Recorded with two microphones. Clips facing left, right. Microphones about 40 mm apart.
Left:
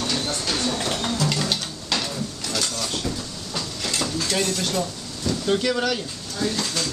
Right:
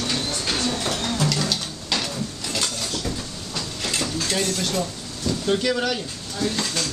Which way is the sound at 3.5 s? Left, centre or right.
Centre.